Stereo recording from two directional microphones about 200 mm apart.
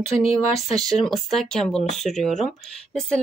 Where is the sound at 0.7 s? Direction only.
Centre (ahead or behind).